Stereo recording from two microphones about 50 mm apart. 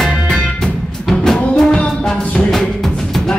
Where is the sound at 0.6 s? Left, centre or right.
Centre.